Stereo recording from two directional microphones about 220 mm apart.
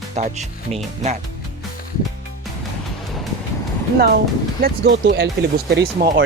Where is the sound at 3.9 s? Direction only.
45° right (ahead or behind).